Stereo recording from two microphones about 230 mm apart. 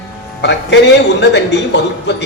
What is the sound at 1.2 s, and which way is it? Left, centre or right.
Speech, left.